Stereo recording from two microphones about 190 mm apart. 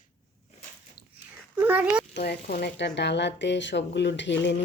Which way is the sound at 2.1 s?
55° left (ahead or behind).